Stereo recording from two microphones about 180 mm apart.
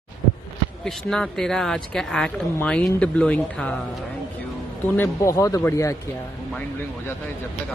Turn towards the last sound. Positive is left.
turn(degrees=15)  # may be behind; listen again after turning